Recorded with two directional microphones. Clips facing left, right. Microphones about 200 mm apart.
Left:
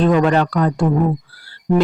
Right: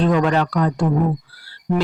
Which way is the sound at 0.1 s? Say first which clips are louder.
Left 3 dB; 45° left (ahead or behind).